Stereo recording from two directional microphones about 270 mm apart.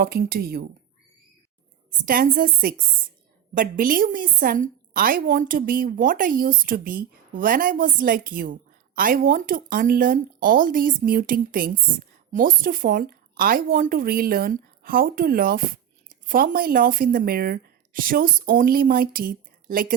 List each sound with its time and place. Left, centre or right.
0.0 s speech: right
2.0 s speech: right